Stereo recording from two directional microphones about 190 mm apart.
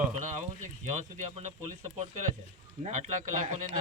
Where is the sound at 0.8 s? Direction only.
40° right (ahead or behind).